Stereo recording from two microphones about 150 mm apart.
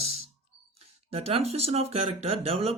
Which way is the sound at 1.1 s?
40° right (ahead or behind).